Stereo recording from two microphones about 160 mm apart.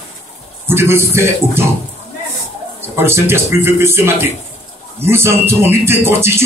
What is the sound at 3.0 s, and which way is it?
Speech, 15° right (ahead or behind).